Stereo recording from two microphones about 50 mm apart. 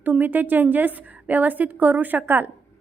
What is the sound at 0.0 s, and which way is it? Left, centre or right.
A woman's voice, right.